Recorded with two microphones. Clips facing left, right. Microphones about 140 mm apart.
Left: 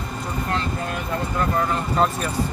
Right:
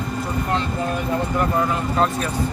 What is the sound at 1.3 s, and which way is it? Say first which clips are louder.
Speech: even; 5° right (ahead or behind).